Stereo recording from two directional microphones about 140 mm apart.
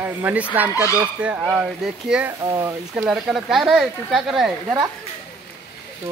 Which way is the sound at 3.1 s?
5° right (ahead or behind).